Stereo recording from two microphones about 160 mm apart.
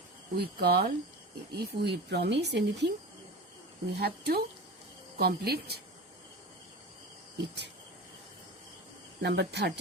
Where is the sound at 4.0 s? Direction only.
80° right.